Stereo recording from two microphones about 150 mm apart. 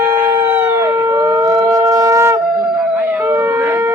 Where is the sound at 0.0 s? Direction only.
15° right (ahead or behind).